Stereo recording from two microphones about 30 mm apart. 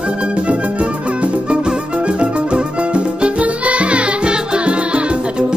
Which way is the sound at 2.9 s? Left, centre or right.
Right.